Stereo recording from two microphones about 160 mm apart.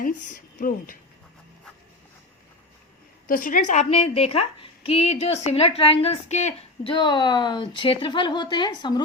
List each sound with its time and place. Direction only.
0.0 s speech: 55° left (ahead or behind)
3.2 s a woman's voice: 60° left (ahead or behind); by 6.9 s 45° left (ahead or behind)
6.9 s a woman's voice: 30° left (ahead or behind)